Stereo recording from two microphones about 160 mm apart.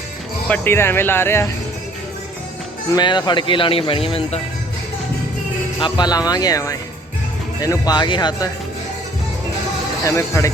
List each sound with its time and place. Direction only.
0.4 s speech: 10° left (ahead or behind)
2.9 s speech: 30° left (ahead or behind)
5.8 s speech: 25° left (ahead or behind)
10.0 s speech: 20° left (ahead or behind)